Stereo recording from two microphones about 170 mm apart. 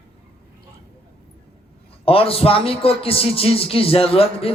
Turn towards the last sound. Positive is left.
turn(degrees=35)  # may be behind; listen again after turning